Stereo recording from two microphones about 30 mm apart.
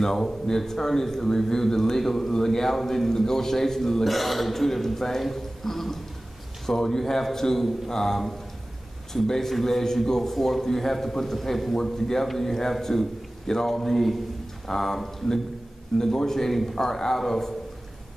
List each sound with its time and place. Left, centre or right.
0.0 s a man's voice: centre
4.0 s a man's voice: centre
11.7 s a man's voice: centre